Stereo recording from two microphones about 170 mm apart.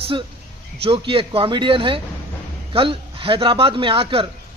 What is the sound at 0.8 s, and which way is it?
A man's voice, 30° right (ahead or behind).